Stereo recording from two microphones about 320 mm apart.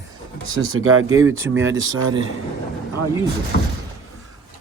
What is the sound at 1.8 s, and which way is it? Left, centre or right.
Speech, right.